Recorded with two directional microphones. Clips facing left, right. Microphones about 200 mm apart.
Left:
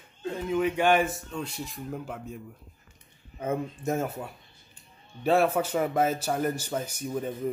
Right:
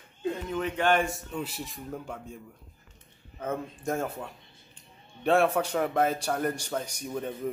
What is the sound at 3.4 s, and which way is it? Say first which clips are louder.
Speech: left 3 dB; 10° left (ahead or behind).